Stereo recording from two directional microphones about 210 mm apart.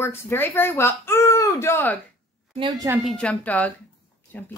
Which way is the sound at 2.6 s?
15° right (ahead or behind).